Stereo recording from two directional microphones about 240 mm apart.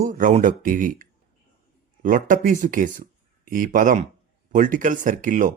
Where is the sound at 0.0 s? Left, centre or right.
Right.